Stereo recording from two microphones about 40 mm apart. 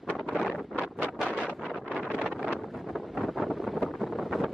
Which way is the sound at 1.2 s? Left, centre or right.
Right.